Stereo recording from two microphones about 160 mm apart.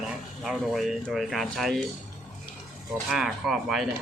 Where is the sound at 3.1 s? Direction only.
Centre (ahead or behind).